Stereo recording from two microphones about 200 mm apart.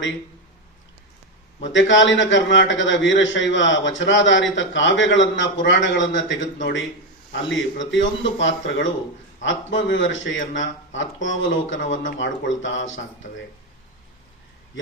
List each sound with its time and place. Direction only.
1.6 s a man's voice: 65° left (ahead or behind)